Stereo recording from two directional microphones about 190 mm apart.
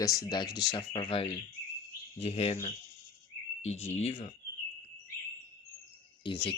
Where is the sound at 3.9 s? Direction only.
35° left (ahead or behind).